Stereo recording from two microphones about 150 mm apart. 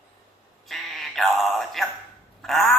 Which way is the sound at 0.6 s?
Centre (ahead or behind).